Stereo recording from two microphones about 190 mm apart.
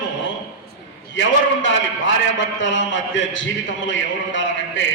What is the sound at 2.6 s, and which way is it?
A man's voice, 80° left.